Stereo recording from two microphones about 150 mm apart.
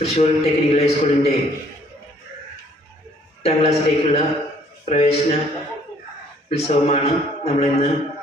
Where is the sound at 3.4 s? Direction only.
40° left (ahead or behind).